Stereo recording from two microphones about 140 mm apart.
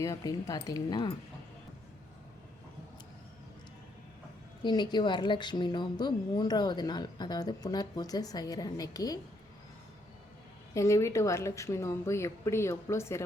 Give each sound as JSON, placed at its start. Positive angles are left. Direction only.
{"t": 0.0, "sound": "a woman's voice", "side_deg": 25}
{"t": 4.6, "sound": "speech", "side_deg": 30}
{"t": 10.8, "sound": "a woman's voice", "side_deg": 20}